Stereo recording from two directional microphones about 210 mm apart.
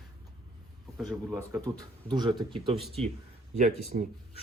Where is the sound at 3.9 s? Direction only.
40° right (ahead or behind).